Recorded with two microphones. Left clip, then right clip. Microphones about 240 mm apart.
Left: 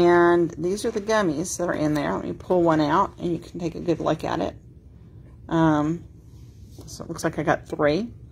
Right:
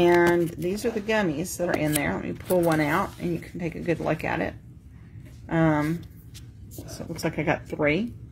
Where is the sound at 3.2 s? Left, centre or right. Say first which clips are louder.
Left 3 dB; left.